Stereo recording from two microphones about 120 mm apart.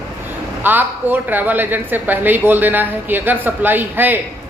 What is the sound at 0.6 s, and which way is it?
A woman's voice, 15° right (ahead or behind).